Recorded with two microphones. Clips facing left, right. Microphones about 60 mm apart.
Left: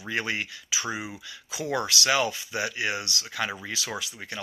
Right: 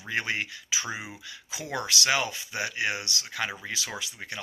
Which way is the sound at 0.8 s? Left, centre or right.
Left.